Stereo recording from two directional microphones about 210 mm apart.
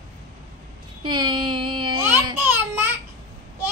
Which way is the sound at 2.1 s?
10° right (ahead or behind).